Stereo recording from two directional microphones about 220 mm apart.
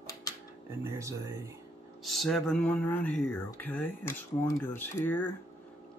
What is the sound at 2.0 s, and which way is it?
Speech, centre (ahead or behind).